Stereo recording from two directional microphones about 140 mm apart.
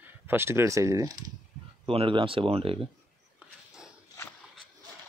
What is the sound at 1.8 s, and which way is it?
Speech, 40° right (ahead or behind).